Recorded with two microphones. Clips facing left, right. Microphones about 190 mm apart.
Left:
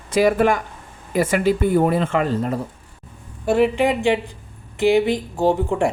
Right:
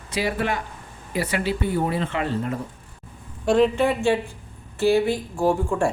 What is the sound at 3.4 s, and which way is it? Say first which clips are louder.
Speech: left 1 dB; 10° left (ahead or behind).